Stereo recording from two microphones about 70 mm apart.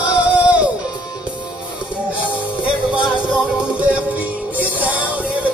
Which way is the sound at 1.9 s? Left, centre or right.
Centre.